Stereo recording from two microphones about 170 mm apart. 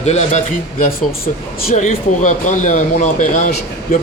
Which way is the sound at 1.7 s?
50° left (ahead or behind).